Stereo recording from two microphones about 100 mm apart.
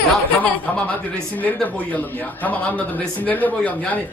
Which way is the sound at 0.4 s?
15° left (ahead or behind).